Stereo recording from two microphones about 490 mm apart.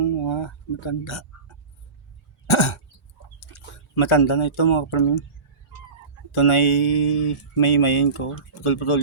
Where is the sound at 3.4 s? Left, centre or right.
Left.